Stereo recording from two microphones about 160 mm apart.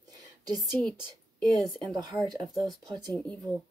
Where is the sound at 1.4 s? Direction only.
Centre (ahead or behind).